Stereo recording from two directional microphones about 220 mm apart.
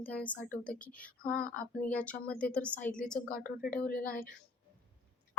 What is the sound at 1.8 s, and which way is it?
Speech, 5° left (ahead or behind).